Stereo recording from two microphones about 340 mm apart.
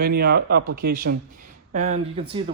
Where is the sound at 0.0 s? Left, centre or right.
Right.